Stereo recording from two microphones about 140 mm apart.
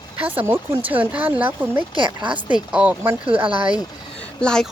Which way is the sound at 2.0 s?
35° right (ahead or behind).